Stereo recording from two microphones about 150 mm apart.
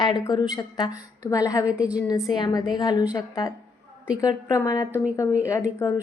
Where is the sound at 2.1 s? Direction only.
25° left (ahead or behind).